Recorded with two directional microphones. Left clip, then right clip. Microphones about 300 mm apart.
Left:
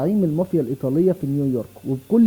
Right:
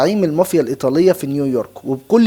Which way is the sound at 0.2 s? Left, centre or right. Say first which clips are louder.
Right 7 dB; centre.